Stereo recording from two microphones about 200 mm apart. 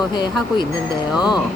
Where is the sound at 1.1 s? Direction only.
5° right (ahead or behind).